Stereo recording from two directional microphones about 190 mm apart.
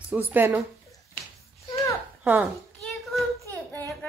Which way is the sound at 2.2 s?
Centre (ahead or behind).